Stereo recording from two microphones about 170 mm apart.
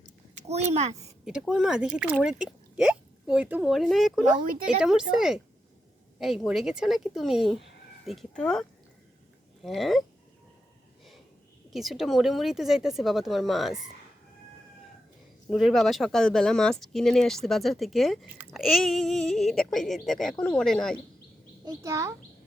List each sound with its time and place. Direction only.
0.3 s a child's voice: 40° right (ahead or behind)
1.2 s speech: 5° right (ahead or behind)
9.6 s speech: centre (ahead or behind)
11.7 s speech: centre (ahead or behind)
15.4 s speech: centre (ahead or behind)
21.6 s a child's voice: 15° right (ahead or behind)